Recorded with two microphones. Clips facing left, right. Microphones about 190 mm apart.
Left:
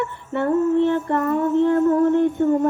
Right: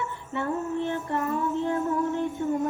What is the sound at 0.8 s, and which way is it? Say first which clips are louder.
Female singing: left 9 dB; 60° left (ahead or behind).